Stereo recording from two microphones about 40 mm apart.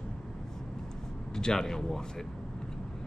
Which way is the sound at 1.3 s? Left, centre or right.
Centre.